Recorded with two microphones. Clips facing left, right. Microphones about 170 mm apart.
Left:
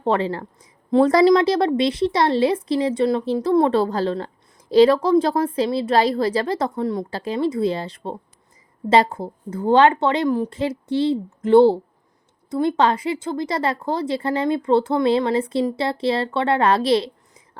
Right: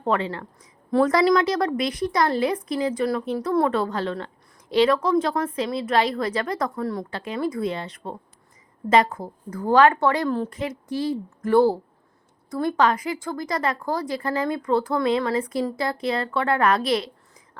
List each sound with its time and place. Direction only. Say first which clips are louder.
0.0 s a woman's voice: left 3 dB; 30° left (ahead or behind)
0.9 s a woman's voice: left 4 dB; 20° left (ahead or behind)
7.1 s a woman's voice: left 4 dB; 35° left (ahead or behind); by 10.5 s 15° left (ahead or behind)
10.5 s a woman's voice: left 6 dB; 30° left (ahead or behind)